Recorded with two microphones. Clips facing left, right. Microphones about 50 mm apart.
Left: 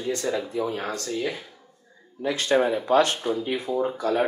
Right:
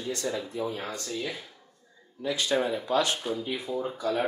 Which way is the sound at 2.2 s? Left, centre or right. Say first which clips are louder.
Left 4 dB; left.